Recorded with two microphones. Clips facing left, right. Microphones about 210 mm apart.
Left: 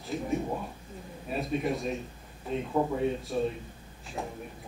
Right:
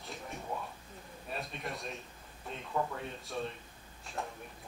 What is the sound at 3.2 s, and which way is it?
A woman's voice, centre (ahead or behind).